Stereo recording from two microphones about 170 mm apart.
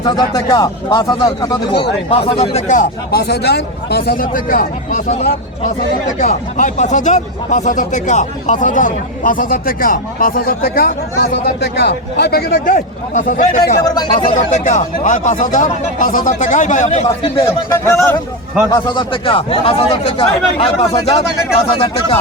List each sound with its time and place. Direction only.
0.0 s speech: 25° left (ahead or behind)
2.0 s speech: 35° left (ahead or behind); by 12.7 s 70° left (ahead or behind)
12.7 s speech: 50° left (ahead or behind)
13.8 s speech: 25° left (ahead or behind)
14.3 s speech: 50° left (ahead or behind)
17.8 s speech: 15° left (ahead or behind)
18.7 s a man's voice: 30° left (ahead or behind)